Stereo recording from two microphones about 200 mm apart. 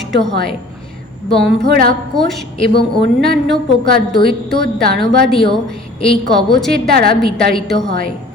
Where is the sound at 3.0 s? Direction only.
60° right (ahead or behind).